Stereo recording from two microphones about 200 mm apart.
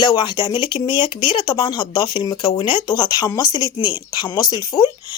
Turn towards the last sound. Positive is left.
turn(degrees=15)  # may be behind; listen again after turning